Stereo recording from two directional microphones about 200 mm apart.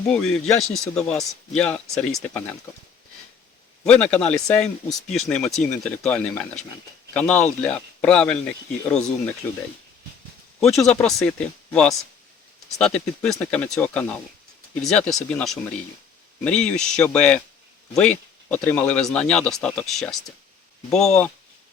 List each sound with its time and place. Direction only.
0.1 s speech: 5° left (ahead or behind)
3.8 s speech: 5° left (ahead or behind)
10.6 s speech: centre (ahead or behind)